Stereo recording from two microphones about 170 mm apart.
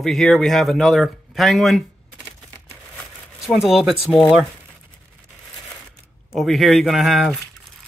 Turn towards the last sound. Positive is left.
turn(degrees=0)  # may be behind; listen again after turning